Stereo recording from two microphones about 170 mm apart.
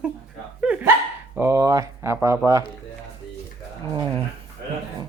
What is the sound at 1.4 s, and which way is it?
Speech, 20° right (ahead or behind).